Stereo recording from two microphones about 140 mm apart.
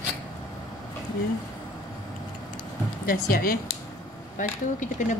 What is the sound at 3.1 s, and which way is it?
Speech, 90° left.